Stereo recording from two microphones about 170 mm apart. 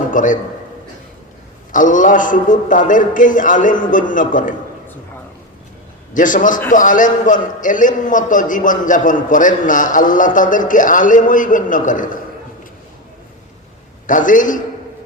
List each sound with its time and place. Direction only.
0.1 s a man's voice: 50° left (ahead or behind)
1.7 s a man's voice: 50° left (ahead or behind)
6.1 s a man's voice: 50° left (ahead or behind)
14.1 s a man's voice: 50° left (ahead or behind)